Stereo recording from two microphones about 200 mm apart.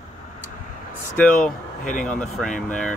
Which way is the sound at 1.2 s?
5° left (ahead or behind).